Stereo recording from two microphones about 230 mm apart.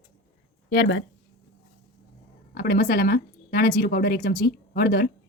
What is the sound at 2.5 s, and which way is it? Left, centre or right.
Speech, left.